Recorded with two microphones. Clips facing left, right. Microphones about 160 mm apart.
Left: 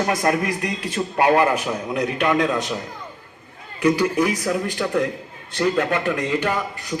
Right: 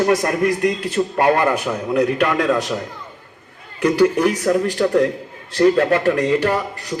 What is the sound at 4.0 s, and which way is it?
A man's voice, 60° right (ahead or behind).